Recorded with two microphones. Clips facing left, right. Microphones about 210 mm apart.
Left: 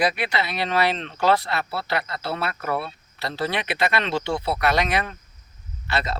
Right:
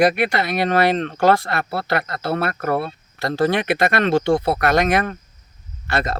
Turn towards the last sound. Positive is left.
turn(degrees=-50)  # may be behind; listen again after turning